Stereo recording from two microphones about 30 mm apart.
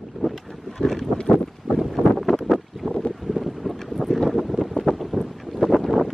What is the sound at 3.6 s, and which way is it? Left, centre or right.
Boat, centre.